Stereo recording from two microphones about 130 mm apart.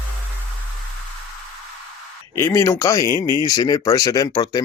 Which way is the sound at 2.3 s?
25° left (ahead or behind).